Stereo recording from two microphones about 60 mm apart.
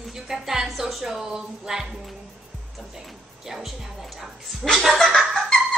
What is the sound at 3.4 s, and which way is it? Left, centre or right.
Speech, centre.